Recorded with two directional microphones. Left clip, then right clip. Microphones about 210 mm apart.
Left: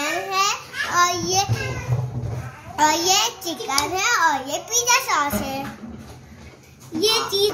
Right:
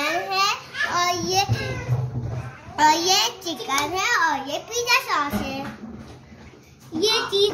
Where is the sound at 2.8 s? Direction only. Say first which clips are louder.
Even; centre (ahead or behind).